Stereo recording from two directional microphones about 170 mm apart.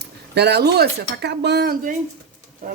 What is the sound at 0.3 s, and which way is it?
Speech, 75° right (ahead or behind).